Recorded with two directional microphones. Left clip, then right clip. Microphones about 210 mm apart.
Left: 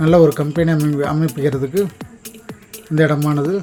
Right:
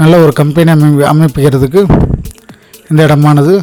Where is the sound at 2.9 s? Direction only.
50° right (ahead or behind).